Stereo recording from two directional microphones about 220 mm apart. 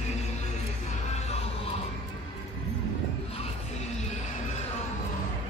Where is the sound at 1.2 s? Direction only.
30° left (ahead or behind).